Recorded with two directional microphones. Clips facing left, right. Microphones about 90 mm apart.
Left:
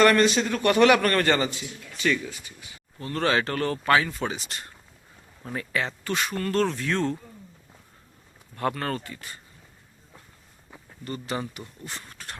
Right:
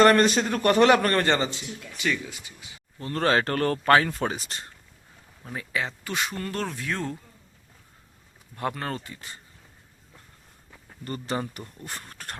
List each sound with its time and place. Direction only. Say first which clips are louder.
0.0 s a man's voice: right 1 dB; 40° right (ahead or behind); by 2.7 s 20° right (ahead or behind)
3.0 s speech: right 1 dB; 35° right (ahead or behind)
5.5 s speech: left 1 dB; 10° right (ahead or behind)
8.5 s speech: left 2 dB; 15° right (ahead or behind)
11.0 s a man's voice: right 1 dB; 40° right (ahead or behind)